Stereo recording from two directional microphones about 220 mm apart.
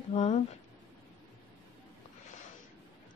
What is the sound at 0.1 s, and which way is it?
Speech, 30° left (ahead or behind).